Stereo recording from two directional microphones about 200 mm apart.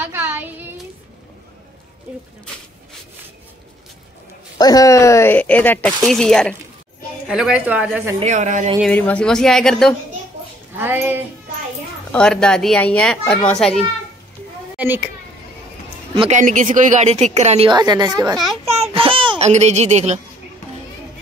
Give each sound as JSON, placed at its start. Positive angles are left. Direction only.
{"t": 0.0, "sound": "a sound", "side_deg": -10}
{"t": 4.6, "sound": "a woman's voice", "side_deg": 20}
{"t": 8.2, "sound": "speech", "side_deg": -35}
{"t": 8.8, "sound": "a child's voice", "side_deg": 5}
{"t": 10.8, "sound": "a woman's voice", "side_deg": -10}
{"t": 12.1, "sound": "a child's voice", "side_deg": 5}
{"t": 14.8, "sound": "a child's voice", "side_deg": -10}
{"t": 16.2, "sound": "speech", "side_deg": -35}
{"t": 17.6, "sound": "a woman's voice", "side_deg": -20}
{"t": 18.7, "sound": "a sound", "side_deg": -30}